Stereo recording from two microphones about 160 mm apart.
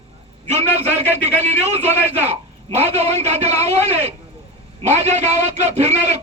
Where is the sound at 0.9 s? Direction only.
40° right (ahead or behind).